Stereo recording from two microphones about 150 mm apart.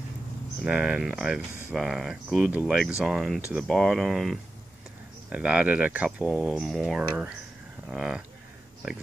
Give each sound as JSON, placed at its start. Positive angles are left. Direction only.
{"t": 0.7, "sound": "speech", "side_deg": -5}